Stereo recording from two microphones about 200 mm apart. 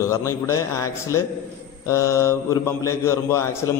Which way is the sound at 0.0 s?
15° left (ahead or behind).